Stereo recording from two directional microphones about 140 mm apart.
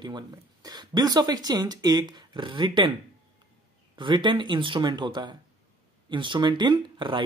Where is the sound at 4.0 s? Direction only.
35° right (ahead or behind).